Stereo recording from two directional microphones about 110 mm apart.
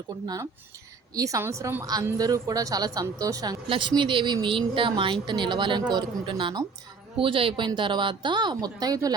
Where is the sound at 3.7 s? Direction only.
45° right (ahead or behind).